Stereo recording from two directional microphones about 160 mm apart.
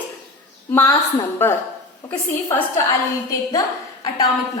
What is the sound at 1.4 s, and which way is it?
Speech, 15° left (ahead or behind).